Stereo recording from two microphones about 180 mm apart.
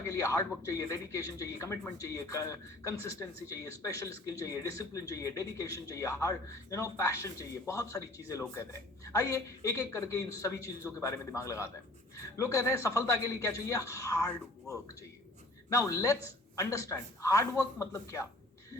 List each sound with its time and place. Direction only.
0.1 s speech: 15° left (ahead or behind)
15.8 s speech: 15° left (ahead or behind)